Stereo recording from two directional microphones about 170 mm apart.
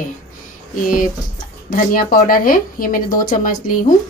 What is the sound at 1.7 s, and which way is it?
A woman's voice, 55° left (ahead or behind).